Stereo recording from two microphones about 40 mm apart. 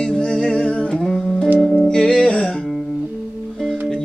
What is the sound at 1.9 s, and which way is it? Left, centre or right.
Music, centre.